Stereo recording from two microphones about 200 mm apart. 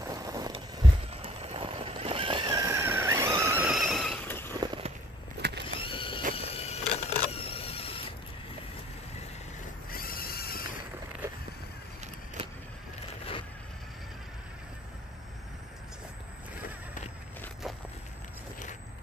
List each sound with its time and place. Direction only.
0.0 s a sound: 20° right (ahead or behind)
1.2 s vehicle: 30° right (ahead or behind); by 4.6 s 10° left (ahead or behind)
4.6 s walk: 20° right (ahead or behind)
5.4 s vehicle: 55° right (ahead or behind)
5.8 s mechanisms: 25° left (ahead or behind)
6.3 s a sound: 30° left (ahead or behind)
9.8 s neigh: 45° left (ahead or behind)